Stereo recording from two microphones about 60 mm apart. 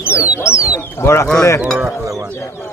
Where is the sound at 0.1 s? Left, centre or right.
Right.